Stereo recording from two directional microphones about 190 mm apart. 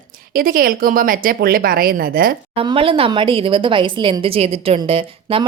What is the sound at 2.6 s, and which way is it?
Speech, 30° right (ahead or behind).